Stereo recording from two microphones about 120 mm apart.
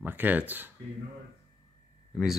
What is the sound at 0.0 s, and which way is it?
Speech, 15° right (ahead or behind).